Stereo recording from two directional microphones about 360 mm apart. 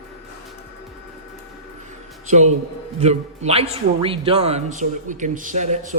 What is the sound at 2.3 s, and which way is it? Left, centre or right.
A man's voice, centre.